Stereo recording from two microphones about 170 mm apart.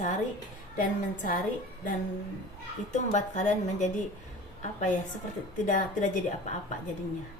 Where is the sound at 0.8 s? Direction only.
50° left (ahead or behind).